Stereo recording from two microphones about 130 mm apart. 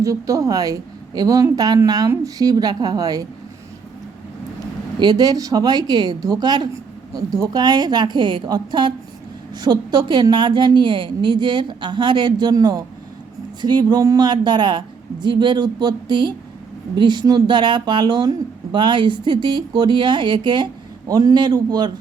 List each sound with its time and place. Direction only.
0.0 s a woman's voice: 25° right (ahead or behind)
4.9 s speech: 30° right (ahead or behind)